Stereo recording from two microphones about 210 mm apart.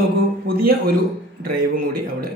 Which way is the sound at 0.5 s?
45° right (ahead or behind).